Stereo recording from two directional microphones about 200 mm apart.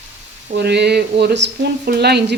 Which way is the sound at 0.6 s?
55° right (ahead or behind).